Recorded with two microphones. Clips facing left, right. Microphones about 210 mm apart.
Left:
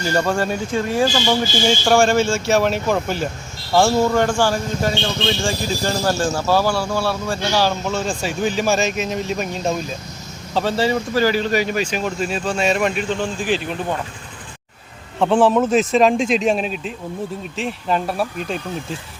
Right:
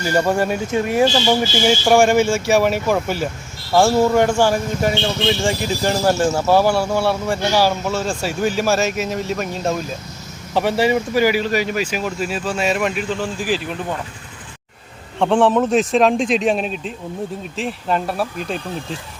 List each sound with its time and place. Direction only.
0.0 s speech: 15° right (ahead or behind)
4.2 s speech: 20° right (ahead or behind)
7.6 s speech: 5° right (ahead or behind)
10.5 s speech: 15° right (ahead or behind)
15.2 s speech: centre (ahead or behind)